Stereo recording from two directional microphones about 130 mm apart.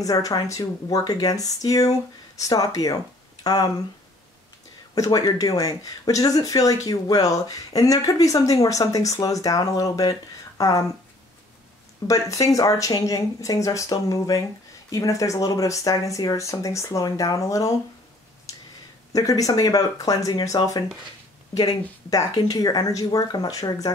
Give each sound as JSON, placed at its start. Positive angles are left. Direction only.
{"t": 0.0, "sound": "speech", "side_deg": 25}
{"t": 4.9, "sound": "speech", "side_deg": 25}
{"t": 12.1, "sound": "speech", "side_deg": 25}
{"t": 19.1, "sound": "speech", "side_deg": 25}